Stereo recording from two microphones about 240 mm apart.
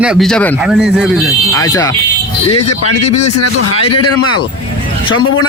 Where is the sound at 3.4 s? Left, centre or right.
Left.